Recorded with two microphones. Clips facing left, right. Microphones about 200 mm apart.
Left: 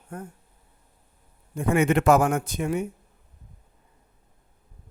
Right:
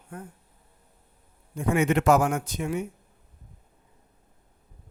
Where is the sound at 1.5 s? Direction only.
55° left (ahead or behind).